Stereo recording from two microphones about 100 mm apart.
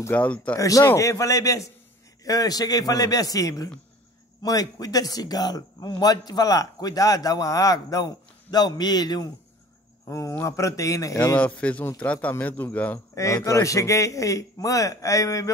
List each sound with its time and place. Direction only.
0.1 s speech: 15° left (ahead or behind)
0.6 s a man's voice: 35° left (ahead or behind)
10.0 s a man's voice: 30° left (ahead or behind)
11.3 s speech: 15° left (ahead or behind)
13.1 s a man's voice: 30° left (ahead or behind)